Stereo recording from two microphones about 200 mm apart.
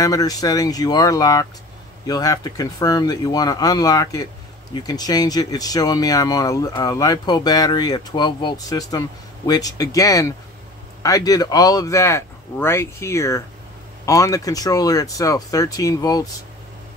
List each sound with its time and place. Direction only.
0.0 s speech: 15° left (ahead or behind)